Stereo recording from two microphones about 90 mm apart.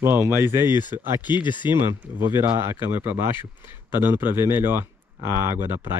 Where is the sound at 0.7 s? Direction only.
55° left (ahead or behind).